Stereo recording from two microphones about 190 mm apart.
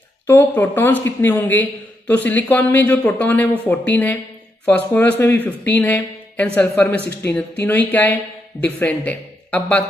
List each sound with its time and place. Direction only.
0.3 s speech: 10° left (ahead or behind)